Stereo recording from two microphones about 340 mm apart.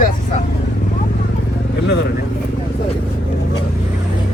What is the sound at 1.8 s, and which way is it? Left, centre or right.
Speech, left.